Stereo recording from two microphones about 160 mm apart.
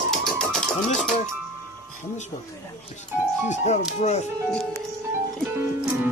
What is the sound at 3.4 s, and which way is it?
Speech, 45° left (ahead or behind).